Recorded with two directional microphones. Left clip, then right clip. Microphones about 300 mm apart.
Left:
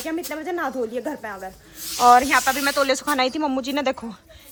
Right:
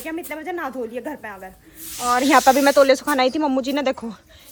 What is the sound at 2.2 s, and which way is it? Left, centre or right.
Speech, centre.